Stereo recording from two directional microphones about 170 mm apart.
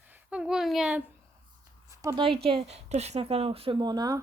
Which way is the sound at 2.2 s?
30° right (ahead or behind).